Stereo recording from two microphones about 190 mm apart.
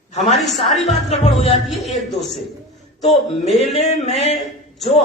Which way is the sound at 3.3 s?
35° left (ahead or behind).